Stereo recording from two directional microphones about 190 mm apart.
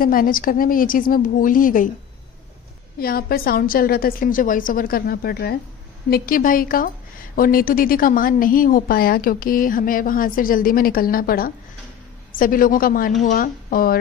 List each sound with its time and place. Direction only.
0.0 s a woman's voice: 50° left (ahead or behind)
3.0 s a woman's voice: 50° left (ahead or behind)